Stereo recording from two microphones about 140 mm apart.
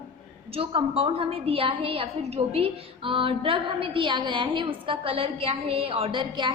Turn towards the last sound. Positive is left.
turn(degrees=-35)  # may be behind; listen again after turning